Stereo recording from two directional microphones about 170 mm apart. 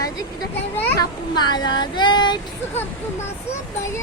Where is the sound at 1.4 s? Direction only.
25° left (ahead or behind).